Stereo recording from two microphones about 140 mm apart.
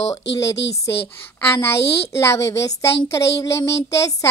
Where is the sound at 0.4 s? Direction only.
20° left (ahead or behind).